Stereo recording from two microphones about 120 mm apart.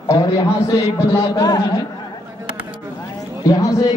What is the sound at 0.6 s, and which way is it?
A man's voice, 25° left (ahead or behind).